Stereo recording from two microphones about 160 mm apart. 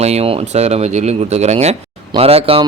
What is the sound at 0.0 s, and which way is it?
Speech, 40° right (ahead or behind).